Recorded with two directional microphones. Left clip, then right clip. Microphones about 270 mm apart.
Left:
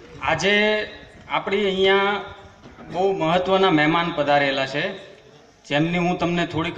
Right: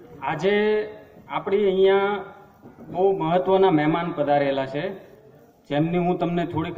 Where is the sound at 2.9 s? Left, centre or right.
Centre.